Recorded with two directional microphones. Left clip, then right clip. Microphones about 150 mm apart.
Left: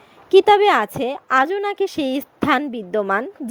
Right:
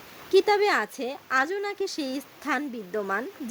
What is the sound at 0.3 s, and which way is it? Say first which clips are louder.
A woman's voice: left 9 dB; 30° left (ahead or behind).